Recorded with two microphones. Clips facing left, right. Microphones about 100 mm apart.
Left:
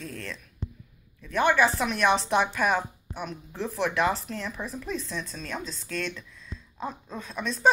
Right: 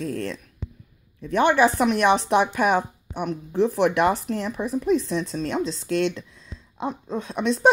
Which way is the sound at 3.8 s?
60° right (ahead or behind).